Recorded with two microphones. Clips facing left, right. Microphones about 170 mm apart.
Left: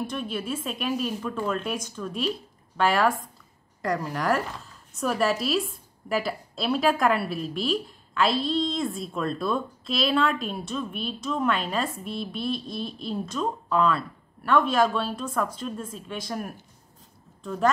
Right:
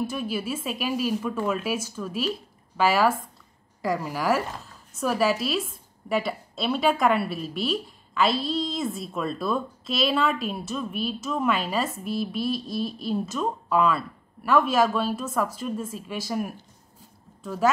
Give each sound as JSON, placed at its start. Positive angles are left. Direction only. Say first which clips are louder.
{"t": 0.0, "sound": "a woman's voice", "louder": "right 2 dB", "side_deg": -5}